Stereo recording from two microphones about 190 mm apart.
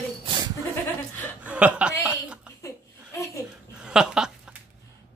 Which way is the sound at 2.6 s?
15° left (ahead or behind).